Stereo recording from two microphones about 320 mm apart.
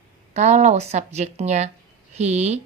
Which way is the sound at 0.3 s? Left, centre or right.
Right.